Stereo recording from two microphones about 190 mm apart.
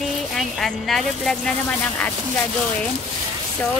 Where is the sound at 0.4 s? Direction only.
Centre (ahead or behind).